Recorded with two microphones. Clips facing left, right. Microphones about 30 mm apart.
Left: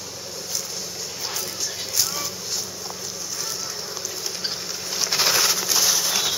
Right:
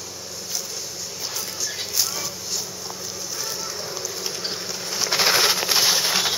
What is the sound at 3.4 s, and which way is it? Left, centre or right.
Vehicle, centre.